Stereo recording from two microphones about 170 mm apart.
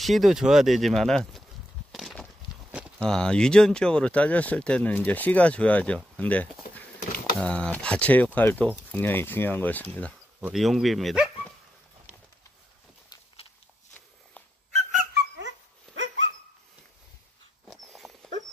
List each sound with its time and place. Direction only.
0.0 s speech: centre (ahead or behind)
1.9 s a sound: centre (ahead or behind)
3.0 s speech: 5° left (ahead or behind)
14.7 s dog: 45° right (ahead or behind)
15.1 s dog: 90° right
17.6 s dog: centre (ahead or behind)